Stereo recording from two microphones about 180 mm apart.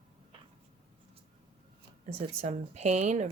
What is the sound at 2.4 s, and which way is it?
Speech, 40° right (ahead or behind).